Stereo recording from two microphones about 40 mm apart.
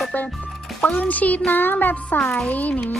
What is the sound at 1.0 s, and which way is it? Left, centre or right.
Speech, left.